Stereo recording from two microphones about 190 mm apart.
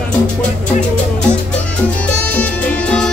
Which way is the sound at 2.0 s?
5° left (ahead or behind).